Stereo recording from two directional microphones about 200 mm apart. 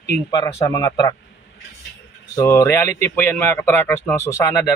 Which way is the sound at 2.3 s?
15° left (ahead or behind).